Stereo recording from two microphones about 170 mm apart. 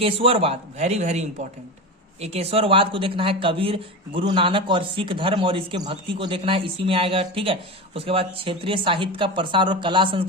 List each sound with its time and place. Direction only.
0.0 s speech: 35° right (ahead or behind)